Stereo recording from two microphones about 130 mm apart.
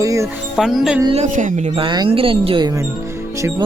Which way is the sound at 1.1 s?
65° right (ahead or behind).